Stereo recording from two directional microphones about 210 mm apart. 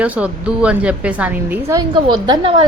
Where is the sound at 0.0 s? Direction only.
5° right (ahead or behind).